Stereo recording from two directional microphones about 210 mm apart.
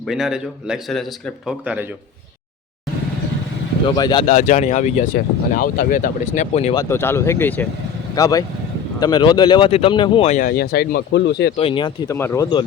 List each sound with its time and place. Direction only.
0.1 s speech: 5° right (ahead or behind)
3.8 s speech: 20° left (ahead or behind)
6.7 s speech: 10° left (ahead or behind); by 11.5 s 55° left (ahead or behind)
11.5 s speech: 25° left (ahead or behind)